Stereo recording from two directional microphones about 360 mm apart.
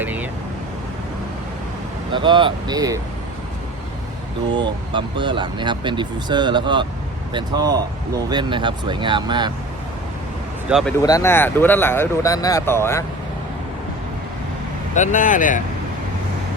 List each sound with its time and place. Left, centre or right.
0.0 s vehicle: centre
2.1 s speech: centre
4.5 s speech: centre
10.7 s speech: centre
14.9 s speech: left